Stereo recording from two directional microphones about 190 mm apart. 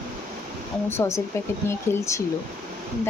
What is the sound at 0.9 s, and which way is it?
Speech, 15° left (ahead or behind).